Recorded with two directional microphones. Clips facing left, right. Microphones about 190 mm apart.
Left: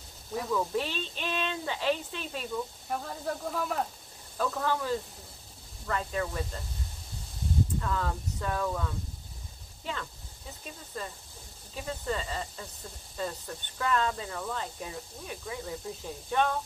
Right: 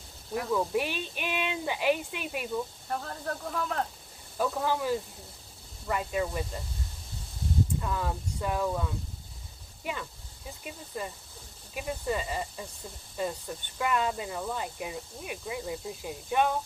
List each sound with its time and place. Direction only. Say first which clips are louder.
0.3 s speech: right 2 dB; 10° right (ahead or behind)
2.9 s speech: left 3 dB; 5° left (ahead or behind)
4.4 s speech: right 1 dB; 10° right (ahead or behind)
7.8 s speech: even; 15° right (ahead or behind)
10.9 s speech: right 2 dB; 15° right (ahead or behind)